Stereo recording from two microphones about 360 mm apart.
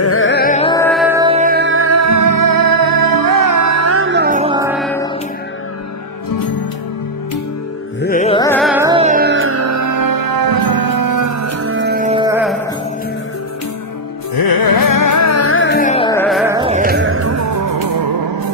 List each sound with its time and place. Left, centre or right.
0.0 s music: left; by 4.7 s centre
4.7 s a sound: centre
8.0 s music: left; by 12.5 s centre
14.3 s music: left; by 16.5 s centre
16.5 s music: centre; by 18.5 s right